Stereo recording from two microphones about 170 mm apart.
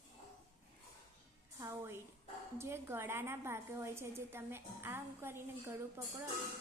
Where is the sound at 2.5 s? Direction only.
15° right (ahead or behind).